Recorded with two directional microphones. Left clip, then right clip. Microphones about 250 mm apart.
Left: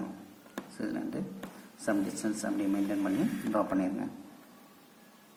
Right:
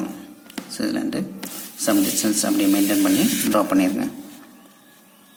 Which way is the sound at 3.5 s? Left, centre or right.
Right.